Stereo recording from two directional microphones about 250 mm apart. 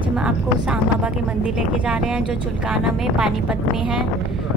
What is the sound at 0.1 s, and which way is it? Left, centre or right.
Speech, centre.